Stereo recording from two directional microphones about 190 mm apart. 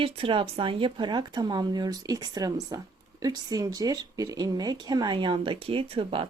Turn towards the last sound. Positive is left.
turn(degrees=-30)  # may be behind; listen again after turning